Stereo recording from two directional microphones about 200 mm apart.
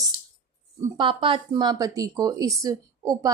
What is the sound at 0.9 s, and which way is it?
Speech, 25° right (ahead or behind).